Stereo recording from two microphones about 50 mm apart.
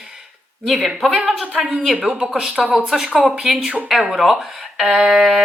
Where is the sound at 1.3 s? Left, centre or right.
Centre.